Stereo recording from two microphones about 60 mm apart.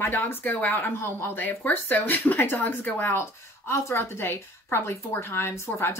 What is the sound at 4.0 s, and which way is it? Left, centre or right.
A woman's voice, left.